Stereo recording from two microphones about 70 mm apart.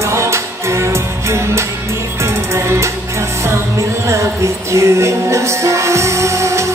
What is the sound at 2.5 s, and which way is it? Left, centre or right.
Music, right.